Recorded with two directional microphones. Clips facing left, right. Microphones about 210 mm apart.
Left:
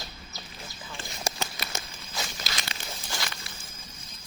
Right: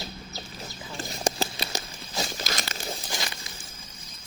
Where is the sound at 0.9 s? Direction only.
30° right (ahead or behind).